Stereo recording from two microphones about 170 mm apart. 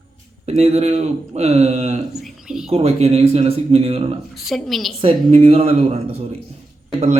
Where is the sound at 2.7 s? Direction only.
35° right (ahead or behind).